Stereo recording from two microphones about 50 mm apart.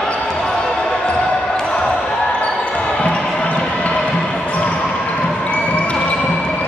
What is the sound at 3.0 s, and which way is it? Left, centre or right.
Basketball bounce, centre.